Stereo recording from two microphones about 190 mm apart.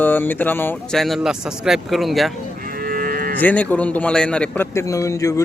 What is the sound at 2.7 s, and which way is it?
Moo, 50° right (ahead or behind).